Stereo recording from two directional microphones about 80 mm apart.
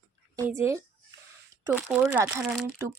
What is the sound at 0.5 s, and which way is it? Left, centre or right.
Speech, right.